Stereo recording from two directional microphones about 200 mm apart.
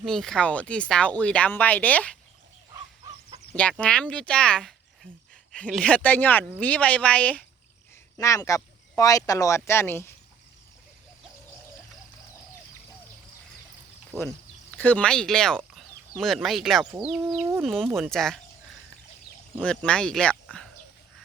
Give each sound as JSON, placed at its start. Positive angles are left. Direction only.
{"t": 0.0, "sound": "speech", "side_deg": 0}
{"t": 3.5, "sound": "speech", "side_deg": 5}
{"t": 5.0, "sound": "speech", "side_deg": -25}
{"t": 5.5, "sound": "speech", "side_deg": 5}
{"t": 14.7, "sound": "speech", "side_deg": 10}
{"t": 19.6, "sound": "speech", "side_deg": 5}